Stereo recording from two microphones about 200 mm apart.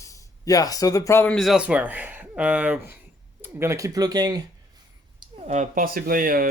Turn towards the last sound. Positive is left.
turn(degrees=-45)  # may be behind; listen again after turning